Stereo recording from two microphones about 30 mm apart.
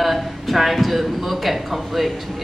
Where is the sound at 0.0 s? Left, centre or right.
Centre.